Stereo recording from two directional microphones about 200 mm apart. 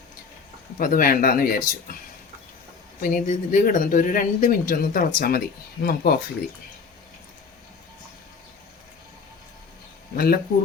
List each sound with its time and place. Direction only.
0.8 s speech: 45° left (ahead or behind)
3.0 s speech: 40° left (ahead or behind)
10.2 s speech: 50° left (ahead or behind)